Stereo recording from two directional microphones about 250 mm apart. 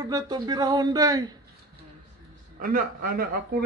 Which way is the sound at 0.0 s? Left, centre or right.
Centre.